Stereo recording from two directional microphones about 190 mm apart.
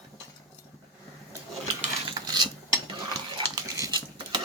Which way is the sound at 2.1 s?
25° right (ahead or behind).